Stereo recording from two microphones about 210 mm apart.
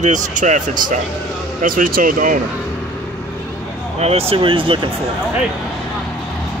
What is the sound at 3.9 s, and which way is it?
Speech, 30° right (ahead or behind).